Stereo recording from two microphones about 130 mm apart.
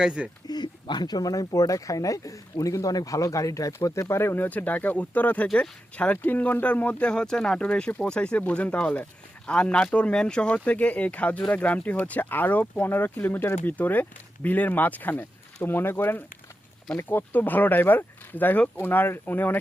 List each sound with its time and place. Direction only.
0.0 s speech: 10° right (ahead or behind)
0.4 s speech: 35° left (ahead or behind); by 19.5 s 15° left (ahead or behind)